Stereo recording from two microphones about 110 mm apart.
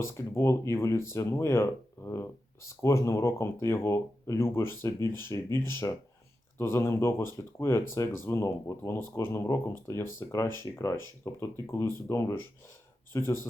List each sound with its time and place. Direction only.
0.1 s speech: 25° left (ahead or behind)